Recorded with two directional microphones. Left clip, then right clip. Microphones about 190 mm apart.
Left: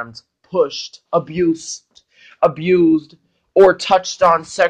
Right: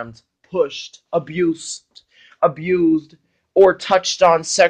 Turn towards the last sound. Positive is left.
turn(degrees=-45)  # may be behind; listen again after turning